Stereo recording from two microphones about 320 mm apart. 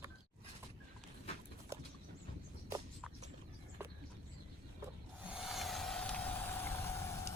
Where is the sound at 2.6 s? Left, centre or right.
Centre.